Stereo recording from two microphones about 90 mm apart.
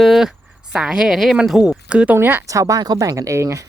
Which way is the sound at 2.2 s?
25° right (ahead or behind).